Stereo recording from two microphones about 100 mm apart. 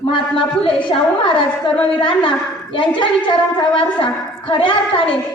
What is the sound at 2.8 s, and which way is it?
A woman's voice, 55° left (ahead or behind).